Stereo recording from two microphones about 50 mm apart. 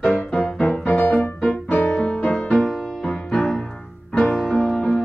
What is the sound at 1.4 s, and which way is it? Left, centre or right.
Music, left.